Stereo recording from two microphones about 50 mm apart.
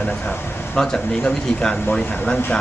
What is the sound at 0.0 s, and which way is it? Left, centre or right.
Speech, left.